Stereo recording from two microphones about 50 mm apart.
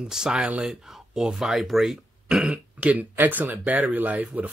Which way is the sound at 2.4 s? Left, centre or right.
Right.